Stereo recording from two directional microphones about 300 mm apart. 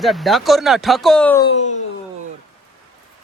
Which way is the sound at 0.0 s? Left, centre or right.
Centre.